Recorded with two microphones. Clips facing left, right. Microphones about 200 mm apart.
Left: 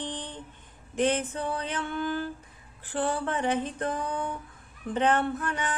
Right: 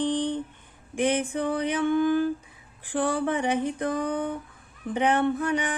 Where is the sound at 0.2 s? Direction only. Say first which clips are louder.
Right 13 dB; 15° right (ahead or behind).